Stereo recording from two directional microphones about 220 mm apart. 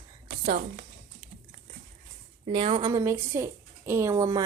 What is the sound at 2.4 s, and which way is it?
A woman's voice, 25° right (ahead or behind).